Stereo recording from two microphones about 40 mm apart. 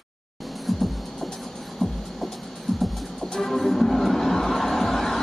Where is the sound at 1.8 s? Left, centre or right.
Centre.